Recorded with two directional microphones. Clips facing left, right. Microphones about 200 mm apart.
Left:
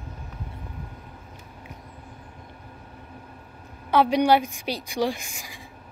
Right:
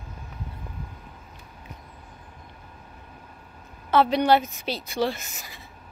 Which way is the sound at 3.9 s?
10° left (ahead or behind).